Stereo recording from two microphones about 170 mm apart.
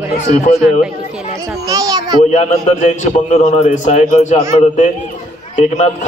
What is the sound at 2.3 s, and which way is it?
A man's voice, 40° left (ahead or behind).